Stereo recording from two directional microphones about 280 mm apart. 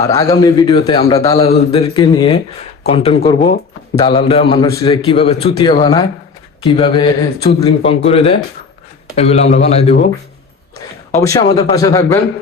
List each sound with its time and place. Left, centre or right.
0.0 s a man's voice: centre
11.2 s a man's voice: centre